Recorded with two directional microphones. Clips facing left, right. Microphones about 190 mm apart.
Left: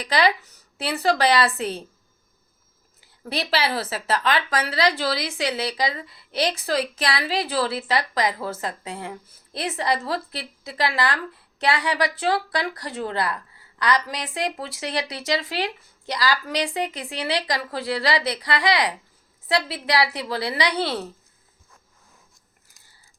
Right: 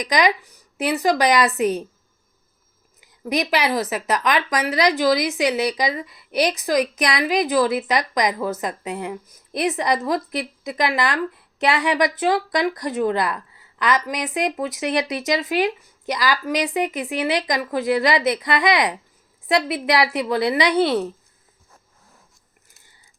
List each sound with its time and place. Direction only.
0.0 s speech: 15° right (ahead or behind)
3.0 s speech: 15° right (ahead or behind)